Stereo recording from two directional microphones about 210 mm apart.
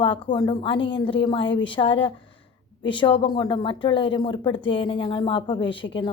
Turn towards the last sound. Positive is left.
turn(degrees=25)  # may be behind; listen again after turning